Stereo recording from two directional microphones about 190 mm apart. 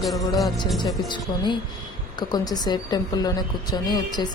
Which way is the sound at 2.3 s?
20° left (ahead or behind).